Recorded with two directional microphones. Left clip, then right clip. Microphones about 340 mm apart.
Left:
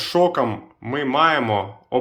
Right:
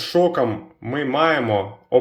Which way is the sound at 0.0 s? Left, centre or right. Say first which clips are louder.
Even; centre.